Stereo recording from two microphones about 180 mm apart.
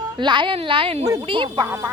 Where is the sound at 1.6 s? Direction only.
15° right (ahead or behind).